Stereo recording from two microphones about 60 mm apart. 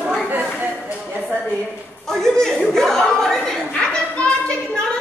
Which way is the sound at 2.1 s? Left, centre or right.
Centre.